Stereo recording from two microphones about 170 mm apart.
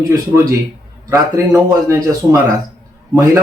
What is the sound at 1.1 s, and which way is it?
Speech, 15° right (ahead or behind).